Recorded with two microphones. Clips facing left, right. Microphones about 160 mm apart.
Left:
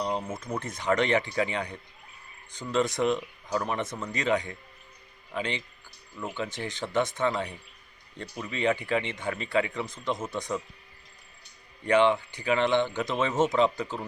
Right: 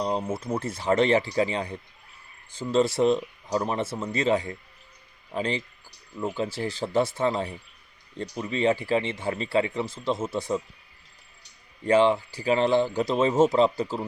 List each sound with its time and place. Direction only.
0.0 s a sound: 35° right (ahead or behind)
0.3 s speech: 10° right (ahead or behind)
0.6 s speech: 30° right (ahead or behind)
11.9 s speech: 30° right (ahead or behind)